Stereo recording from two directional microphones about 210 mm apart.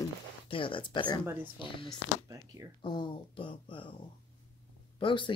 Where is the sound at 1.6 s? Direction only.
25° left (ahead or behind).